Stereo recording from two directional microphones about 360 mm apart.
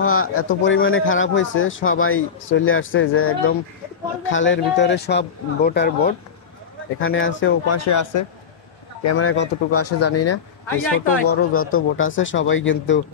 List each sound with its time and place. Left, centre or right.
0.0 s speech: left
9.1 s speech: left